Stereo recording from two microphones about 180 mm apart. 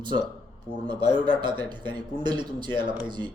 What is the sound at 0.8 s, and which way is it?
Speech, 25° right (ahead or behind).